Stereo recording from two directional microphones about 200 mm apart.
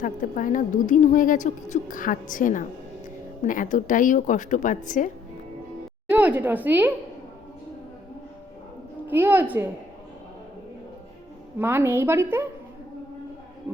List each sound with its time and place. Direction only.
0.0 s a woman's voice: 40° left (ahead or behind)
6.1 s a woman's voice: 10° right (ahead or behind)
9.0 s a woman's voice: 10° right (ahead or behind)
11.6 s a woman's voice: 10° right (ahead or behind)